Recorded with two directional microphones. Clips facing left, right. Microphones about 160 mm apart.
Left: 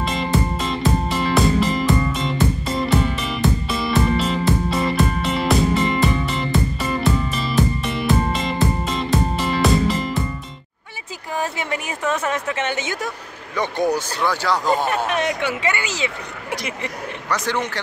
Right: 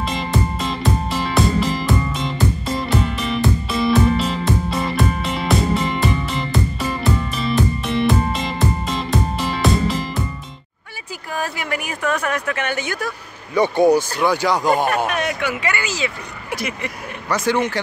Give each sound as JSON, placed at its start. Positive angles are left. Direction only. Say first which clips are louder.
{"t": 0.0, "sound": "music", "louder": "left 1 dB", "side_deg": 0}
{"t": 11.3, "sound": "a sound", "louder": "even", "side_deg": 25}
{"t": 13.6, "sound": "speech", "louder": "right 6 dB", "side_deg": -10}
{"t": 15.0, "sound": "speech", "louder": "even", "side_deg": 25}
{"t": 16.8, "sound": "speech", "louder": "even", "side_deg": -10}